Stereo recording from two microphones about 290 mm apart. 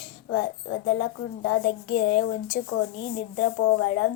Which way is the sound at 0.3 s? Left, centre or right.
Left.